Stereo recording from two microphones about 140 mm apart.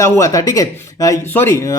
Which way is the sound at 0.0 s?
20° left (ahead or behind).